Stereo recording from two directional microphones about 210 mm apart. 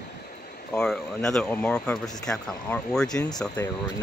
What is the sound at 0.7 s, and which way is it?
Speech, centre (ahead or behind).